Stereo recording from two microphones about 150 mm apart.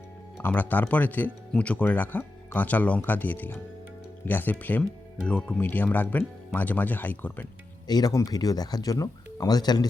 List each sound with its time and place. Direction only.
0.3 s speech: 10° left (ahead or behind)
7.9 s speech: 25° left (ahead or behind)